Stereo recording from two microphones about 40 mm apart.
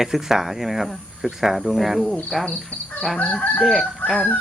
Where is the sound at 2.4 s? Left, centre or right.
Left.